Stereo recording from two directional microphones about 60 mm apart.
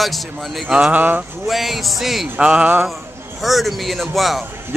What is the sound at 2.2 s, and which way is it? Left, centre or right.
Speech, right.